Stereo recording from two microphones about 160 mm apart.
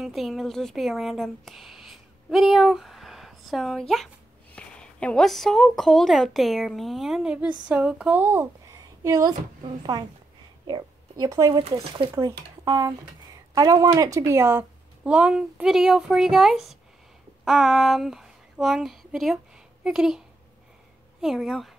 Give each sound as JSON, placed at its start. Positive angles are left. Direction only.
{"t": 0.0, "sound": "a woman's voice", "side_deg": 0}
{"t": 21.2, "sound": "a woman's voice", "side_deg": 0}